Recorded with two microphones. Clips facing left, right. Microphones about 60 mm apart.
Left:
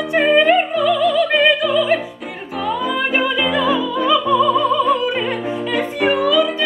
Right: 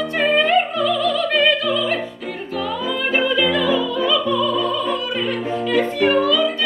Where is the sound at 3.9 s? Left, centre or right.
Left.